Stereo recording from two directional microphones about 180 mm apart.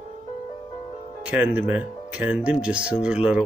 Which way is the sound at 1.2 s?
5° right (ahead or behind).